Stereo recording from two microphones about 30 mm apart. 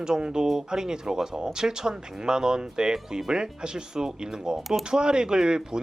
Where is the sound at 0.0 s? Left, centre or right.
Right.